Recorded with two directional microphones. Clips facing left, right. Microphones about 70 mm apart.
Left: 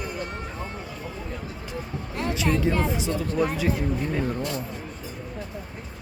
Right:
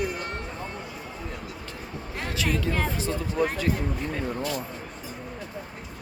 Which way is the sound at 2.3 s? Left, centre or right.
Left.